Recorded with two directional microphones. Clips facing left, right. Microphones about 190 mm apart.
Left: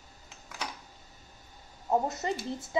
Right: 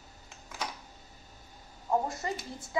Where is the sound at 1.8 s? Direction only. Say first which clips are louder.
Left 2 dB; 20° left (ahead or behind).